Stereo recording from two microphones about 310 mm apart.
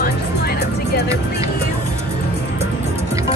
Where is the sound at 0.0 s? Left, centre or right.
Left.